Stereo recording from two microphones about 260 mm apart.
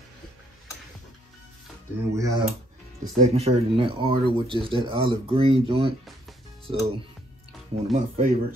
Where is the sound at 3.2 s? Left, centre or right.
Right.